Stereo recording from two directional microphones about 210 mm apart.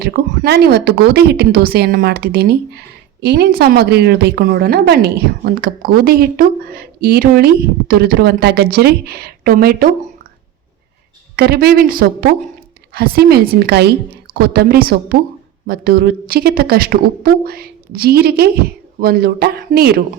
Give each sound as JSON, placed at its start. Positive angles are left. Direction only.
{"t": 0.0, "sound": "speech", "side_deg": -50}
{"t": 11.3, "sound": "speech", "side_deg": -45}